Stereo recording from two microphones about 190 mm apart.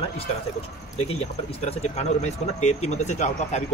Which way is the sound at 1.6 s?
35° left (ahead or behind).